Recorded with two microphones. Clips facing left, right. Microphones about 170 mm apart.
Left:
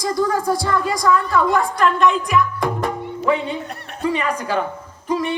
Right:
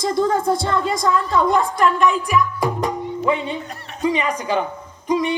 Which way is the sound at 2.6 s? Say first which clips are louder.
Even; 15° right (ahead or behind).